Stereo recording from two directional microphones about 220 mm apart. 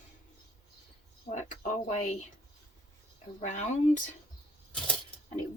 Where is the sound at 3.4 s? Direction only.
35° left (ahead or behind).